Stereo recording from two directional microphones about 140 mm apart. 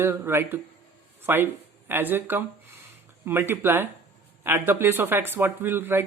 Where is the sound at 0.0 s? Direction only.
15° right (ahead or behind).